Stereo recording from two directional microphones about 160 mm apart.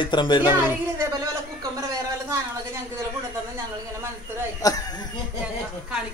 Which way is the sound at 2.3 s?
15° right (ahead or behind).